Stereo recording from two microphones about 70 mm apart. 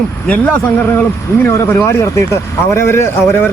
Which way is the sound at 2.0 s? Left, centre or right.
Left.